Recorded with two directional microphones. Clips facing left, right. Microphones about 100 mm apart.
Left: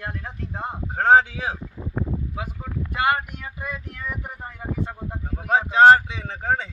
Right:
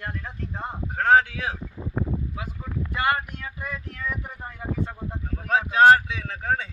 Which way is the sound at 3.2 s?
20° left (ahead or behind).